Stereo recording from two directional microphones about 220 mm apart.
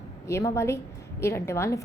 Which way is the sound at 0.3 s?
15° left (ahead or behind).